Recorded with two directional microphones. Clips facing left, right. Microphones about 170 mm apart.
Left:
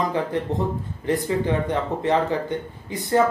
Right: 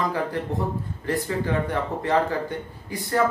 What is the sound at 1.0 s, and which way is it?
Speech, 20° left (ahead or behind).